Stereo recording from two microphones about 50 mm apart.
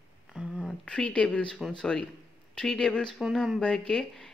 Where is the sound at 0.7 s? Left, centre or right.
Left.